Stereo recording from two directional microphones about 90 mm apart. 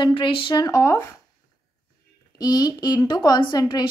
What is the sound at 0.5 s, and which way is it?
Speech, 40° left (ahead or behind).